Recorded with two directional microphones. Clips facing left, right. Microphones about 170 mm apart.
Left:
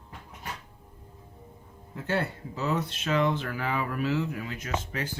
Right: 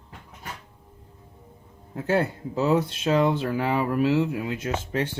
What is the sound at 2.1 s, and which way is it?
Speech, 40° right (ahead or behind).